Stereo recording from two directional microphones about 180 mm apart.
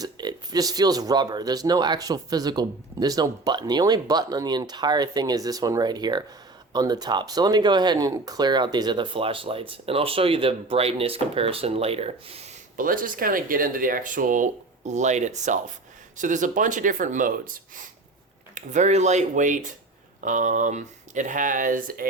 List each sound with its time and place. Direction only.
0.0 s speech: 20° right (ahead or behind)
12.7 s speech: 50° right (ahead or behind)